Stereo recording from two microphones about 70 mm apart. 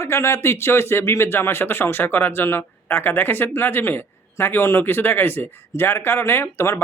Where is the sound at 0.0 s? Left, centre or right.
Left.